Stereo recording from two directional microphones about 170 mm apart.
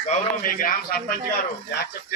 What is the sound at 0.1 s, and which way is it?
Speech, 50° left (ahead or behind).